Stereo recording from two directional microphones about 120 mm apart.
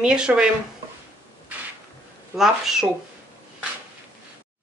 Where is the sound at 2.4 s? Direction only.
5° right (ahead or behind).